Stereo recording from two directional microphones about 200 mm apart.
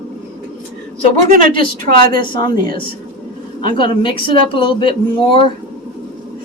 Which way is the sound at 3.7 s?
25° left (ahead or behind).